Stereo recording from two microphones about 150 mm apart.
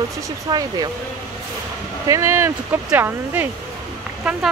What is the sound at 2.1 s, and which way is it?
Speech, 20° right (ahead or behind).